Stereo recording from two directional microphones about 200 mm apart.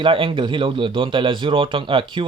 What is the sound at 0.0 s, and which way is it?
A man's voice, 25° right (ahead or behind).